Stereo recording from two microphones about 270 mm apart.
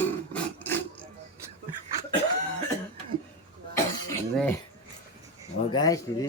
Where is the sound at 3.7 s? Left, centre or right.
Centre.